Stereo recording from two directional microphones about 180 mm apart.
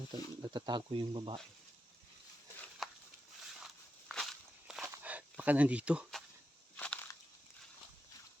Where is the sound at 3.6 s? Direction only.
Centre (ahead or behind).